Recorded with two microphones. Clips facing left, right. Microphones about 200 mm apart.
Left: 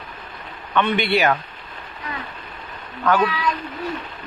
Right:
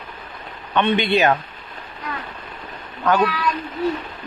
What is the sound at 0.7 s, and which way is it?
Speech, 20° right (ahead or behind).